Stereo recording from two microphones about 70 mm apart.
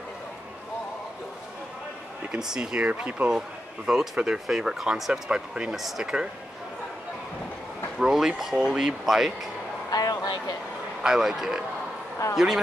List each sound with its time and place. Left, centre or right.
2.3 s speech: centre
3.3 s a man's voice: centre
8.0 s speech: centre
9.8 s a man's voice: left
11.0 s speech: centre
12.2 s a man's voice: left